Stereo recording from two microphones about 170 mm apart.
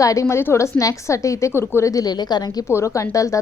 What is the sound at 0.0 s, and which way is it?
A woman's voice, 20° left (ahead or behind).